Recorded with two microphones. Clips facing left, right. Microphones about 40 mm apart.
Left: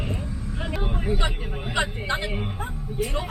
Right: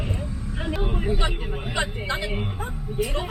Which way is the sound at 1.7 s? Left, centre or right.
Centre.